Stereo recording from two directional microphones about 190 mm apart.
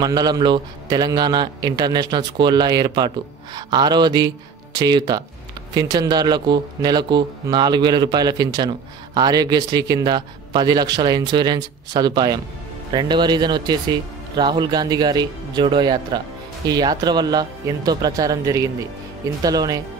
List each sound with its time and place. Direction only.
0.0 s speech: 20° right (ahead or behind)